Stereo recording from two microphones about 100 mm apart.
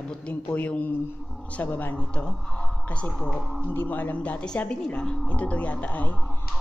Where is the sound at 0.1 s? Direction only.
15° left (ahead or behind).